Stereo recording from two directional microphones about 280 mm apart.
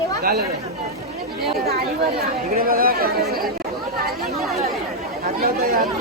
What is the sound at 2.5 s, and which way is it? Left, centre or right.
Speech, right.